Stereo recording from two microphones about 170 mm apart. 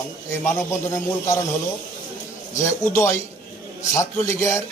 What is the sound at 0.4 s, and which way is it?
Speech, 15° left (ahead or behind).